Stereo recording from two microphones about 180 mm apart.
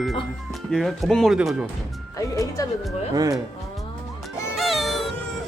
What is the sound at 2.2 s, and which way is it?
Speech, 20° left (ahead or behind).